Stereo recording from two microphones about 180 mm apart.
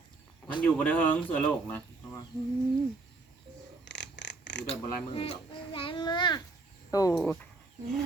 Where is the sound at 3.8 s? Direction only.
75° left (ahead or behind).